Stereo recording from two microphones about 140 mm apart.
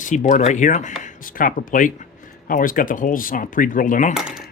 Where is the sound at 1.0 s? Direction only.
80° left.